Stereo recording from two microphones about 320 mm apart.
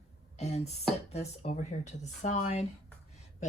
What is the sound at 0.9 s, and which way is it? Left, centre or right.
Speech, centre.